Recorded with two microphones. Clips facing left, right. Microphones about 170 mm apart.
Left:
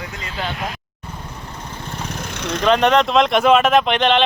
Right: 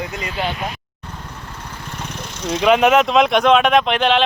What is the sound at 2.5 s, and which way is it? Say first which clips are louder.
Speech: right 2 dB; 10° right (ahead or behind).